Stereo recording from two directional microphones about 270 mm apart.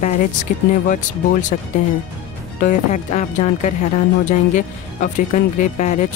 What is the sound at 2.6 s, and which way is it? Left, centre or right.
Speech, left.